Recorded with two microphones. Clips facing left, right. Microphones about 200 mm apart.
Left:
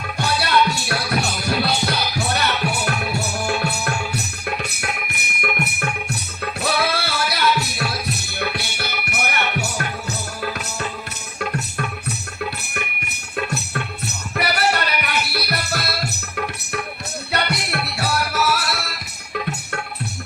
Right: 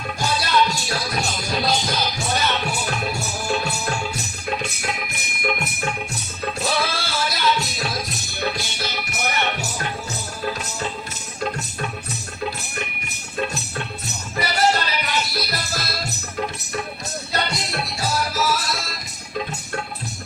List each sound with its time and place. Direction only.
0.2 s music: 65° left (ahead or behind)
6.6 s music: 65° left (ahead or behind)
12.7 s music: 65° left (ahead or behind)